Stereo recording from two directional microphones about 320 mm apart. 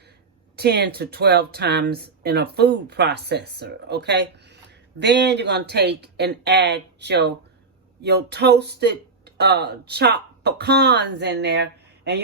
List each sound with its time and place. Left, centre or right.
0.5 s speech: right